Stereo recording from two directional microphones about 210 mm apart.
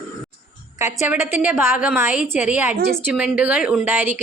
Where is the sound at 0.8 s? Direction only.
15° right (ahead or behind).